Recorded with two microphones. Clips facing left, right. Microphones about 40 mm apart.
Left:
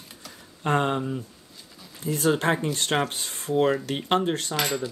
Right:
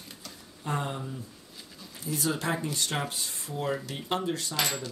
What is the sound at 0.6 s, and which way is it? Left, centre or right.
Speech, left.